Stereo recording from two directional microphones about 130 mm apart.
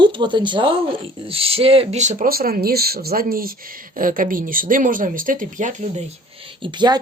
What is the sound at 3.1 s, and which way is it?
Speech, 90° right.